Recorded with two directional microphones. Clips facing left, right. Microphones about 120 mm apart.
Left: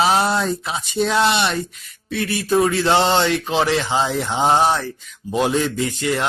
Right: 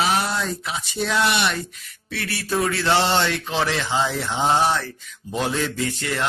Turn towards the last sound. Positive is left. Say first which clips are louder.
# left 4 dB
turn(degrees=15)  # may be behind; listen again after turning